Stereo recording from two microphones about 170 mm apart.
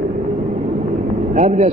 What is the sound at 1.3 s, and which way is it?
Speech, 40° right (ahead or behind).